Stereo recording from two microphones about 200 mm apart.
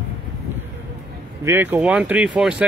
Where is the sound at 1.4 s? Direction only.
10° right (ahead or behind).